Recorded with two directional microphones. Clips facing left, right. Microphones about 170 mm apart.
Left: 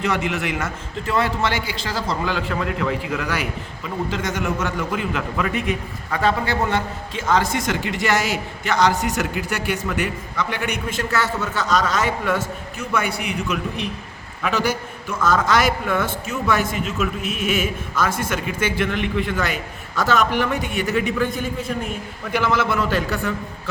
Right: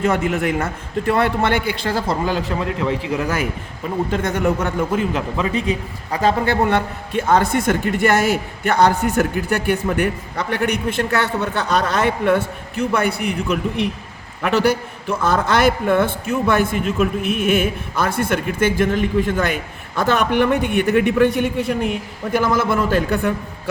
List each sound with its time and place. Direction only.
0.0 s a man's voice: 50° right (ahead or behind)
2.6 s a man's voice: 25° right (ahead or behind)
3.8 s a man's voice: 55° right (ahead or behind)
4.9 s a man's voice: 35° right (ahead or behind)
6.2 s a man's voice: 50° right (ahead or behind); by 21.9 s 70° right (ahead or behind)
22.3 s a man's voice: 45° right (ahead or behind)